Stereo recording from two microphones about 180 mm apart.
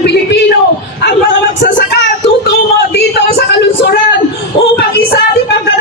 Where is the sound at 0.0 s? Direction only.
70° left (ahead or behind).